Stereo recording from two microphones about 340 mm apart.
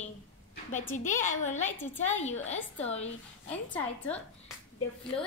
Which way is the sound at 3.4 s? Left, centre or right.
Centre.